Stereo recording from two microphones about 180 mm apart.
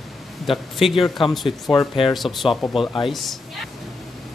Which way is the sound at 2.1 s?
Centre (ahead or behind).